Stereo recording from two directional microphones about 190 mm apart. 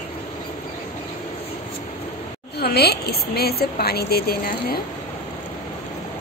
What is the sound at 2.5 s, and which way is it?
A woman's voice, 55° left (ahead or behind).